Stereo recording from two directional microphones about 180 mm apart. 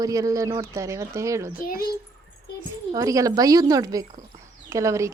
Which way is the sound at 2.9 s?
20° right (ahead or behind).